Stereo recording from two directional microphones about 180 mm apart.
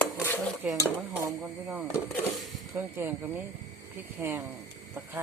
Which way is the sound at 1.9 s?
15° left (ahead or behind).